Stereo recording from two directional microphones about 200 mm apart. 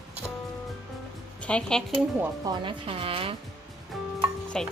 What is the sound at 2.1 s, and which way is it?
Speech, 10° right (ahead or behind).